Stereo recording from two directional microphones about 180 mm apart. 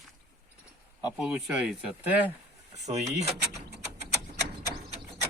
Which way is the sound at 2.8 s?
40° right (ahead or behind).